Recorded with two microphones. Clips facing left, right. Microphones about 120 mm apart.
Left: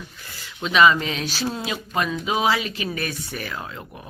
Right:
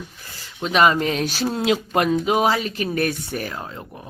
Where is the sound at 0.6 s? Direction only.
45° right (ahead or behind).